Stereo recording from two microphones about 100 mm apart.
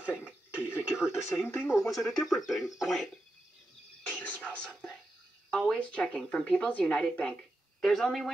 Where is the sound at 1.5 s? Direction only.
25° left (ahead or behind).